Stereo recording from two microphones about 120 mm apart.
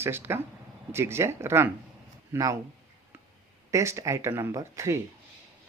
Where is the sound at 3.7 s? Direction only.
25° right (ahead or behind).